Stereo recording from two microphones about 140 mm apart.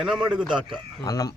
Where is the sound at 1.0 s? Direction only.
25° left (ahead or behind).